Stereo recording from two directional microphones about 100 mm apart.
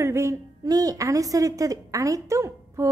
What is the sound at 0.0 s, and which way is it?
A woman's voice, 30° right (ahead or behind).